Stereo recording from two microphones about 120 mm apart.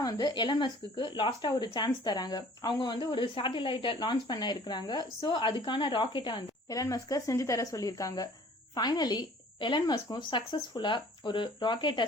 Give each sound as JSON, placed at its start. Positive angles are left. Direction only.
{"t": 0.0, "sound": "a woman's voice", "side_deg": 35}
{"t": 6.7, "sound": "a woman's voice", "side_deg": 30}